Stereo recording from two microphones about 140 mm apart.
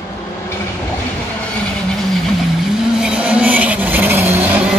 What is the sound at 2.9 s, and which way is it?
Vehicle, 5° right (ahead or behind).